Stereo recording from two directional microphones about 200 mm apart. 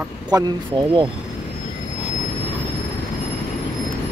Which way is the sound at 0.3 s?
20° right (ahead or behind).